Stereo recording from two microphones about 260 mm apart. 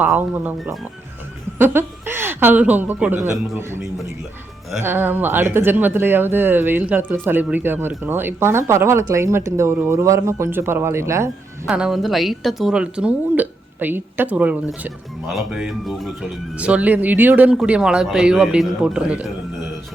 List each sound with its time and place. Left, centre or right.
0.0 s speech: centre